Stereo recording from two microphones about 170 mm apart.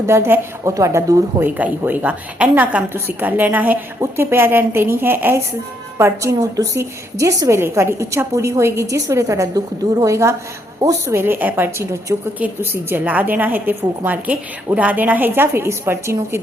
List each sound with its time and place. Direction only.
0.1 s a woman's voice: 15° right (ahead or behind)